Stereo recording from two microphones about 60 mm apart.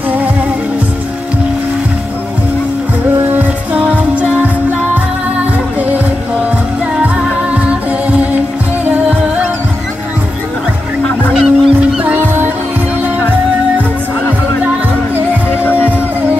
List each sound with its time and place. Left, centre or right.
3.3 s music: right
7.5 s music: right
11.4 s goose: right